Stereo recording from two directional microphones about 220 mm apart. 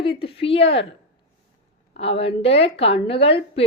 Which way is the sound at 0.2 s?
25° left (ahead or behind).